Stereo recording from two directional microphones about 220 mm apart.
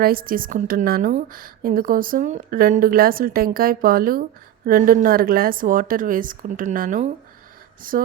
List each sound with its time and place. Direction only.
0.0 s speech: 40° right (ahead or behind)